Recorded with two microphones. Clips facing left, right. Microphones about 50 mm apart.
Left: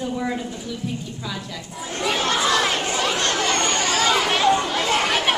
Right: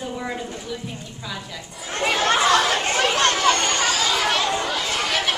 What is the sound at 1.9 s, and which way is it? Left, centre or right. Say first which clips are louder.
Chatter: right 2 dB; right.